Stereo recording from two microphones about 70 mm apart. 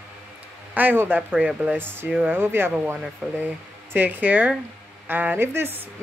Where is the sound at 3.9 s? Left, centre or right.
Right.